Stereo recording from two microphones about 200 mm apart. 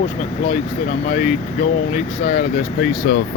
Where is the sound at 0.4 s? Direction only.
30° left (ahead or behind).